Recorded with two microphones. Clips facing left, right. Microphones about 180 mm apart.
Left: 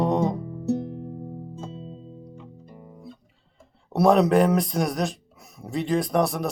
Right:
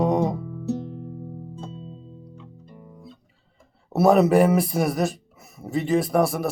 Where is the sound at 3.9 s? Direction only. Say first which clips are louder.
Right 1 dB; 5° right (ahead or behind).